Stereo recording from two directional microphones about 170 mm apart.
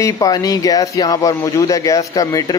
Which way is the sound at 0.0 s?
20° left (ahead or behind).